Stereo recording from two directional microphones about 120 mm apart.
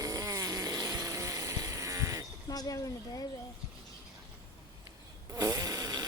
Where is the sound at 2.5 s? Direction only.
30° left (ahead or behind).